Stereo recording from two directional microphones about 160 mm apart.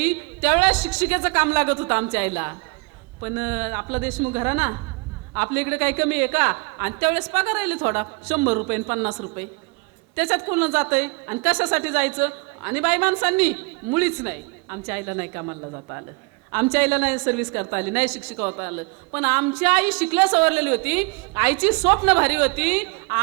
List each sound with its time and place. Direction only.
0.0 s a woman's voice: 10° right (ahead or behind)
16.7 s a woman's voice: 10° right (ahead or behind)